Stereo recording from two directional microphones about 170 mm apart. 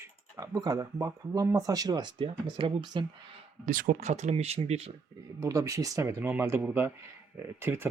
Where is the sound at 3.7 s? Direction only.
50° right (ahead or behind).